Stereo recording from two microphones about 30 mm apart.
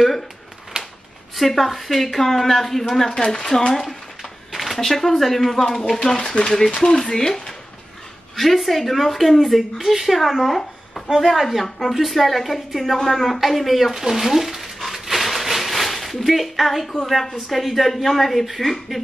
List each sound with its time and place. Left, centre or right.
0.7 s a sound: right
1.3 s a woman's voice: centre
3.5 s speech: left
4.5 s a woman's voice: centre
8.4 s speech: centre
10.5 s a sound: centre
11.1 s a woman's voice: centre